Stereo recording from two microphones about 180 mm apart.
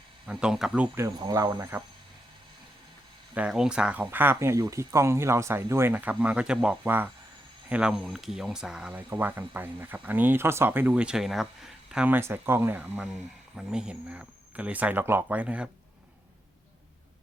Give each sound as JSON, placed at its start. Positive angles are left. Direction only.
{"t": 0.3, "sound": "speech", "side_deg": -5}
{"t": 0.9, "sound": "speech", "side_deg": -15}
{"t": 3.3, "sound": "speech", "side_deg": -5}